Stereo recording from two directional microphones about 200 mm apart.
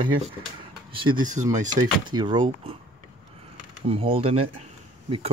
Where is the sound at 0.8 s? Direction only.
25° right (ahead or behind).